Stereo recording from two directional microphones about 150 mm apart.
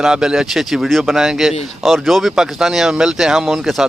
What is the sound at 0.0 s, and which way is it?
Speech, 5° right (ahead or behind).